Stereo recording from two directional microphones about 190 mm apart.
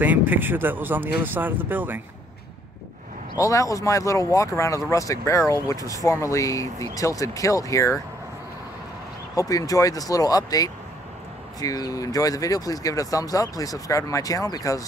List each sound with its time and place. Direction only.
0.0 s speech: 10° right (ahead or behind)
3.3 s speech: 15° left (ahead or behind)
9.3 s speech: 20° left (ahead or behind)